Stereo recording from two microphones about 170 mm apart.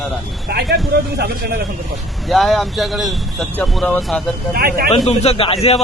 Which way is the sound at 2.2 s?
Centre (ahead or behind).